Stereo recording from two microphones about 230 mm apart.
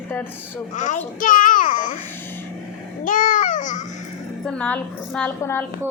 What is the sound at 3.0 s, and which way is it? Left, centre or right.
Babbling, left.